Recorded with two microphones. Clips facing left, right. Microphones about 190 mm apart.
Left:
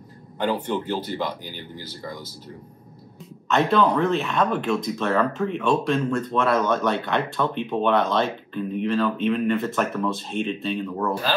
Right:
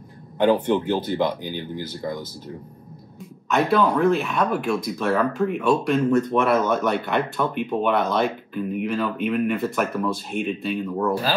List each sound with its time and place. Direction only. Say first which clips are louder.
0.4 s speech: right 6 dB; 15° right (ahead or behind)
3.5 s speech: even; 10° right (ahead or behind)